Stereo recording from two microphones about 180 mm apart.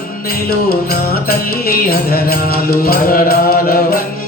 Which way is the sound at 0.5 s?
55° left (ahead or behind).